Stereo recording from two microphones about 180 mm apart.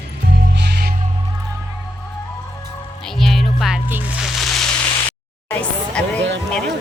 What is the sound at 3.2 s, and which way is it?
Music, centre (ahead or behind).